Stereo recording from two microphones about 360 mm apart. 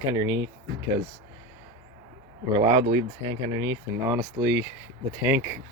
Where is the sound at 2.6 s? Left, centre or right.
Centre.